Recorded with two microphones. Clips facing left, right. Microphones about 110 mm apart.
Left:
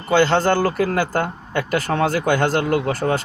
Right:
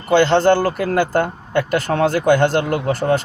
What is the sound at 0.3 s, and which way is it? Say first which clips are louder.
Speech: right 4 dB; 20° right (ahead or behind).